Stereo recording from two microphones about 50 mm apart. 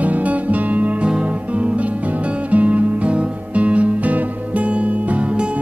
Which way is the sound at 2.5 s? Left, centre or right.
Right.